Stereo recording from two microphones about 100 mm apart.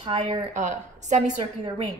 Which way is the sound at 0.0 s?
60° right (ahead or behind).